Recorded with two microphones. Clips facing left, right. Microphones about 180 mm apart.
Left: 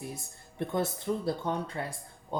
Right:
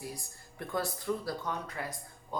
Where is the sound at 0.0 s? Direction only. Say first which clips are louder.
Left 2 dB; 25° left (ahead or behind).